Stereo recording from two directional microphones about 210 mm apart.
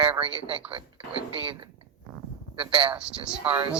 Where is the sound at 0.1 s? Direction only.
25° right (ahead or behind).